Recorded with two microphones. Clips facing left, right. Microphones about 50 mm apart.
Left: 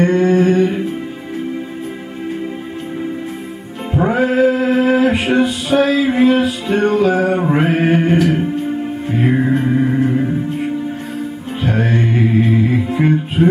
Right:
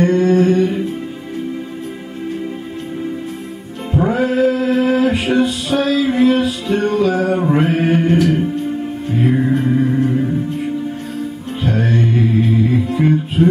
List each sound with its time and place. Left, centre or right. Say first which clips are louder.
0.0 s music: even; centre
3.9 s music: left 1 dB; centre